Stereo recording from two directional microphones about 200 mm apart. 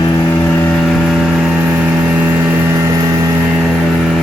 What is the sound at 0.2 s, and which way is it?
Vehicle, 10° left (ahead or behind).